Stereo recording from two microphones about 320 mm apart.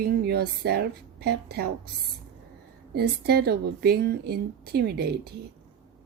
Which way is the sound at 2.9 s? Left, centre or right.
Right.